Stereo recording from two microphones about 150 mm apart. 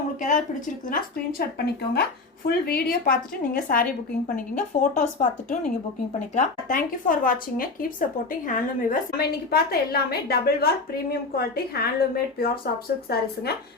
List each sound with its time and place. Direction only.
0.2 s speech: 55° left (ahead or behind)
0.9 s a woman's voice: 80° left
4.4 s a woman's voice: 60° left (ahead or behind); by 12.5 s 85° left